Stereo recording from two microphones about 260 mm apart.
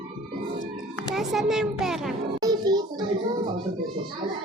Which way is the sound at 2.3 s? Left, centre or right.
Centre.